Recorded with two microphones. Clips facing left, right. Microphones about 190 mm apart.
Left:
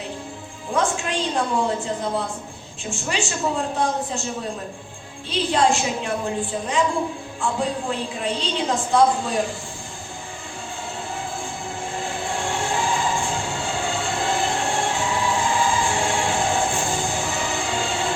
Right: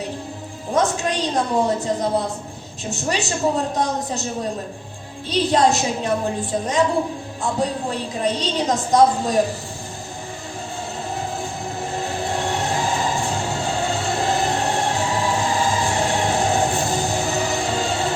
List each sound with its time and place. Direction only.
0.7 s a woman's voice: 40° right (ahead or behind)
5.3 s a woman's voice: 40° right (ahead or behind)
11.8 s train: 40° right (ahead or behind)